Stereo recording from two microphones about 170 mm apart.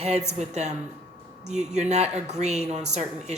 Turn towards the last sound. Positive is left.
turn(degrees=-40)  # may be behind; listen again after turning